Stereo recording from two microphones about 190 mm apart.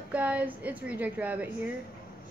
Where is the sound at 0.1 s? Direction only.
5° right (ahead or behind).